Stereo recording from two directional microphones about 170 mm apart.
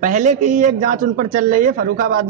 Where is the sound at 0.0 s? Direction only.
45° right (ahead or behind).